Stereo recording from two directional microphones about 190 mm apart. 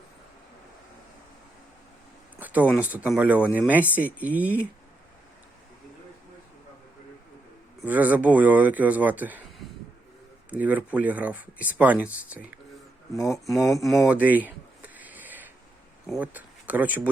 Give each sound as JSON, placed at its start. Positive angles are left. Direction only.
{"t": 2.4, "sound": "a sound", "side_deg": -10}
{"t": 2.7, "sound": "speech", "side_deg": -10}
{"t": 7.9, "sound": "speech", "side_deg": -10}
{"t": 13.1, "sound": "speech", "side_deg": 15}
{"t": 13.4, "sound": "a sound", "side_deg": 0}
{"t": 16.0, "sound": "speech", "side_deg": -5}